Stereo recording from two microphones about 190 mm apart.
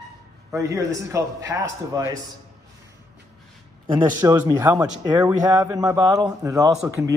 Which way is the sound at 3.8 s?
25° right (ahead or behind).